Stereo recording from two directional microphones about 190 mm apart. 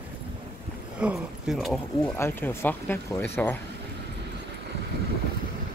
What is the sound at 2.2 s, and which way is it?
Speech, 10° left (ahead or behind).